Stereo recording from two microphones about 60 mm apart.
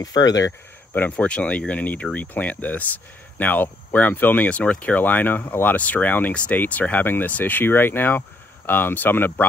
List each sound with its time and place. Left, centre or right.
0.0 s speech: left
0.5 s speech: left
1.1 s speech: centre